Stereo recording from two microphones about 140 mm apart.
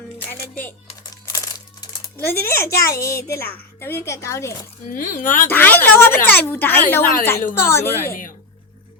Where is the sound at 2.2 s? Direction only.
15° left (ahead or behind).